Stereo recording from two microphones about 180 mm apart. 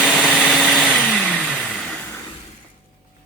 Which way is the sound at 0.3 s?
Centre (ahead or behind).